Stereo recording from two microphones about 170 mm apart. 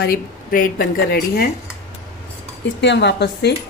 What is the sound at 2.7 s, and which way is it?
Speech, 90° left.